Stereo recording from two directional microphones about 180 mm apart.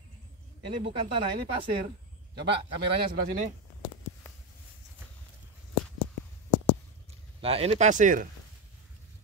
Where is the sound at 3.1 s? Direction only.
45° right (ahead or behind).